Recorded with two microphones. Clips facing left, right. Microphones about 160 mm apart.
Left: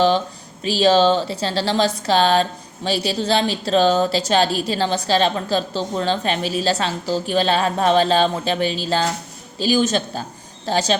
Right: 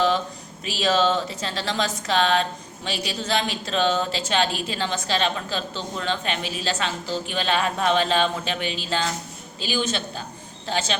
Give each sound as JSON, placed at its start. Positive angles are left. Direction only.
{"t": 0.6, "sound": "a woman's voice", "side_deg": 30}